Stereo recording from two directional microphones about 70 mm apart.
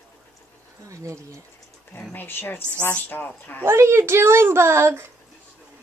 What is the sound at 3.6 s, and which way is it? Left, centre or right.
A woman's voice, right.